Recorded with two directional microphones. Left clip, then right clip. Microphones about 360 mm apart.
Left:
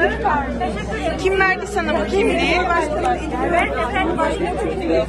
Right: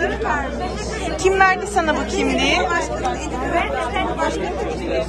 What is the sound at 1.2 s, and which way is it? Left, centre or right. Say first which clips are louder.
A woman's voice: right 3 dB; centre.